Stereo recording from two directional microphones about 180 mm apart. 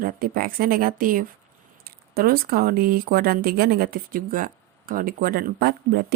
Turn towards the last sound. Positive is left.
turn(degrees=-60)  # may be behind; listen again after turning